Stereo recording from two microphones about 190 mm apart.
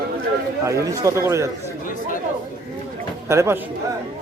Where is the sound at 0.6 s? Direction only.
15° right (ahead or behind).